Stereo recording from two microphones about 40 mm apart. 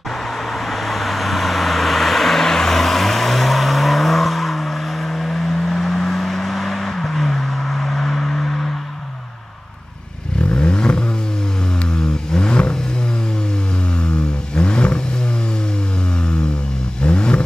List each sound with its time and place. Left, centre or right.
0.5 s vehicle: centre
10.4 s vehicle: left
13.9 s vehicle: left
17.0 s vehicle: left